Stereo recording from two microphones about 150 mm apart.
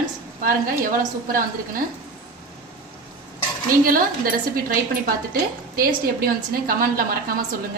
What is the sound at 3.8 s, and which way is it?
A woman's voice, 70° right (ahead or behind).